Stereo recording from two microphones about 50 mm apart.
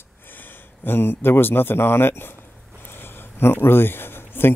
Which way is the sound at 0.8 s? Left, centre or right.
Left.